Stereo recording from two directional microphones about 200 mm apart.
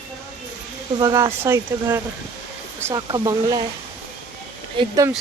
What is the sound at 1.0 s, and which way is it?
Speech, 15° right (ahead or behind).